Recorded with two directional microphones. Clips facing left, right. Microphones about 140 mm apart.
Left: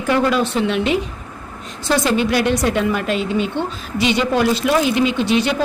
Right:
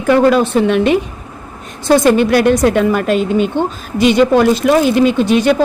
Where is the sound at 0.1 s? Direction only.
50° right (ahead or behind).